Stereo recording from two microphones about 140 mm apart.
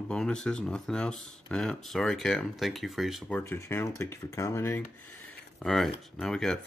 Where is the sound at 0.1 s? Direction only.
5° left (ahead or behind).